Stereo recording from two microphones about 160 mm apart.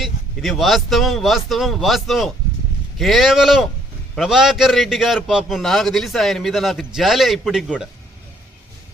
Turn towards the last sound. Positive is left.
turn(degrees=-5)  # may be behind; listen again after turning